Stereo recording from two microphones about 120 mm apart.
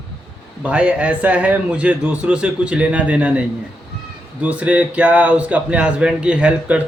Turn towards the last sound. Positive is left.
turn(degrees=-10)  # may be behind; listen again after turning